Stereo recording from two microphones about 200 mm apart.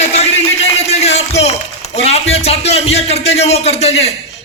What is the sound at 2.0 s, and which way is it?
A man's voice, 30° left (ahead or behind).